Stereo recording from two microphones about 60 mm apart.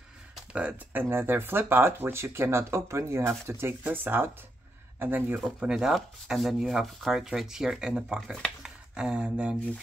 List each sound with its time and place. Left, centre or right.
0.5 s speech: centre
0.9 s speech: right
3.8 s speech: right
5.6 s speech: centre
5.9 s speech: centre
8.6 s a sound: centre